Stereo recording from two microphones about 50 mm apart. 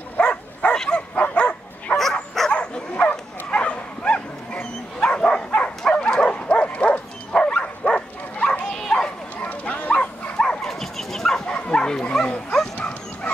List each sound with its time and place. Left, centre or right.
0.2 s dog: left
1.1 s bow-wow: left
5.0 s dog: centre
8.7 s bow-wow: centre
9.4 s bow-wow: left
10.3 s dog: centre
11.4 s bow-wow: left